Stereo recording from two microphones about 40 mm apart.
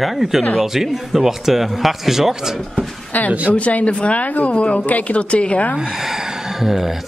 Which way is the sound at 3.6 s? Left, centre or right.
Left.